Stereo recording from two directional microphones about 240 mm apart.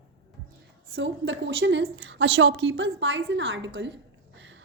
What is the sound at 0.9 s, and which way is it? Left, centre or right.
A woman's voice, right.